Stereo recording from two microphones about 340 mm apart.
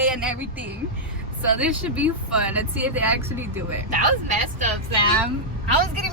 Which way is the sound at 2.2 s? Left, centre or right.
Right.